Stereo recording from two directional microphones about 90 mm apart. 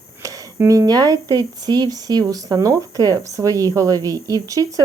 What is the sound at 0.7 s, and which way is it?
Speech, 45° right (ahead or behind).